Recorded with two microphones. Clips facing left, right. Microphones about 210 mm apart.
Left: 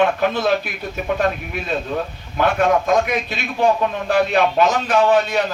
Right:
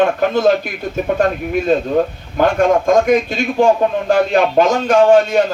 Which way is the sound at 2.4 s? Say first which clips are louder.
Right 4 dB; 45° right (ahead or behind).